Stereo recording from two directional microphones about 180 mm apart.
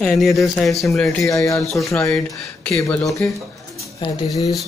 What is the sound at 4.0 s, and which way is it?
Speech, 20° left (ahead or behind).